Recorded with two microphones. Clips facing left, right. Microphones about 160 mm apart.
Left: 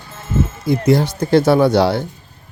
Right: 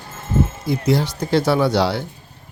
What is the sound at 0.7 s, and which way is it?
Speech, 50° left (ahead or behind).